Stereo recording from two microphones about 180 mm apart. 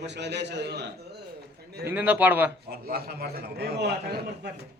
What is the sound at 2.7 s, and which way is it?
A man's voice, 60° right (ahead or behind).